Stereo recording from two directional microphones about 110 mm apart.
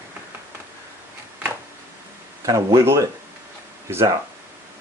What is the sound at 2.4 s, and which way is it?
Speech, 30° right (ahead or behind).